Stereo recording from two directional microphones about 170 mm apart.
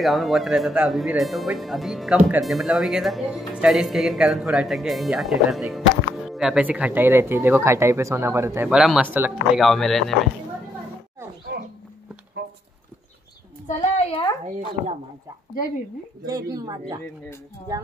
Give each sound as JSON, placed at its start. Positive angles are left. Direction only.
{"t": 0.0, "sound": "speech", "side_deg": 0}
{"t": 8.6, "sound": "speech", "side_deg": -5}
{"t": 9.6, "sound": "speech", "side_deg": 0}
{"t": 13.7, "sound": "a woman's voice", "side_deg": 40}
{"t": 16.3, "sound": "a woman's voice", "side_deg": -20}